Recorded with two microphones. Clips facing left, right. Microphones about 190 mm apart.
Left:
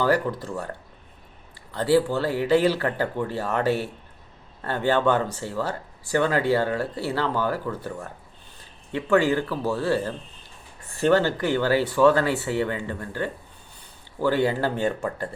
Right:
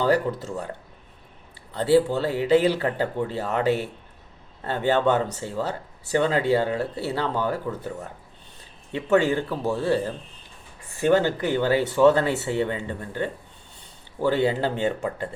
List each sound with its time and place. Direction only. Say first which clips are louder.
0.0 s speech: right 1 dB; 20° right (ahead or behind)